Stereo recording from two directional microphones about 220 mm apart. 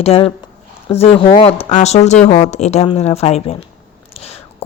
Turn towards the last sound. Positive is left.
turn(degrees=30)  # may be behind; listen again after turning